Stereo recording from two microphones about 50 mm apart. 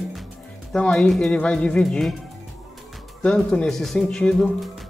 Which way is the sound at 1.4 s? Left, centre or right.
Left.